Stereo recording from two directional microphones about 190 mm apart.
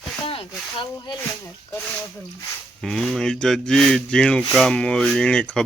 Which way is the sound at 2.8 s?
Centre (ahead or behind).